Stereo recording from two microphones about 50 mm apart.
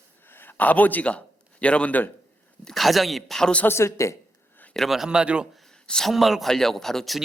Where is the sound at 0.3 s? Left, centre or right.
Left.